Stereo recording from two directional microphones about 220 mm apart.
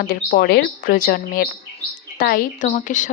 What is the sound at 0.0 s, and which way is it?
A woman's voice, 40° left (ahead or behind).